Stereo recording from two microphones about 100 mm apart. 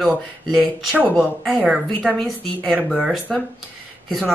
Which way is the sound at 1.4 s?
5° right (ahead or behind).